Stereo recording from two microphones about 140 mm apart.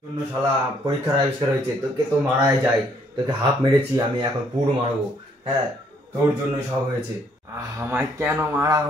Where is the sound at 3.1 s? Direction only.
30° right (ahead or behind).